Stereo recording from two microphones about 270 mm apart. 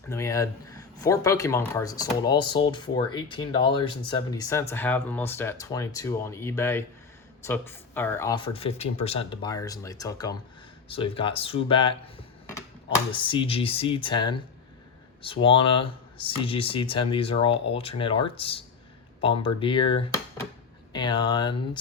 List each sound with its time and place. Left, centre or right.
0.1 s speech: centre